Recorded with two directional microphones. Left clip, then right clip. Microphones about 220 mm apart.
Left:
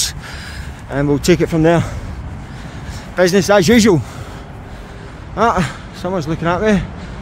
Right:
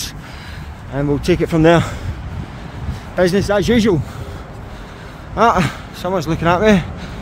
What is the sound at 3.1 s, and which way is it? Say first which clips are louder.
Speech: left 3 dB; 15° left (ahead or behind).